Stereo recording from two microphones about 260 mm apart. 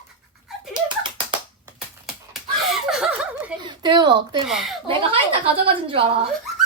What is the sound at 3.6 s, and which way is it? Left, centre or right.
Speech, centre.